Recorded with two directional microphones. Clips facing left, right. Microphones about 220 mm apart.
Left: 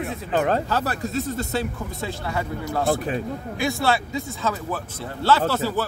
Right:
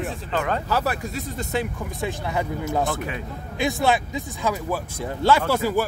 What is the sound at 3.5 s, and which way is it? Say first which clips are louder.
Speech: right 2 dB; 20° right (ahead or behind).